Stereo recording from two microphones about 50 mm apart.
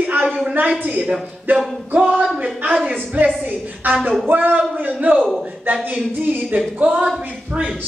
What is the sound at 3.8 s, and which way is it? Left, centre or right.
A man's voice, right.